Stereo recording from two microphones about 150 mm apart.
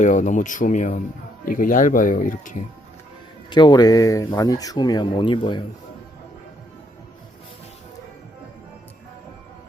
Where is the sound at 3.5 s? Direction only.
30° left (ahead or behind).